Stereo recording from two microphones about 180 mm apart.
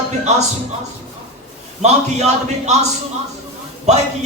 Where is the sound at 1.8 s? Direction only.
40° right (ahead or behind).